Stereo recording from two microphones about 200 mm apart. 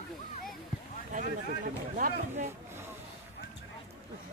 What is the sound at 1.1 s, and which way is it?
Speech, 40° right (ahead or behind).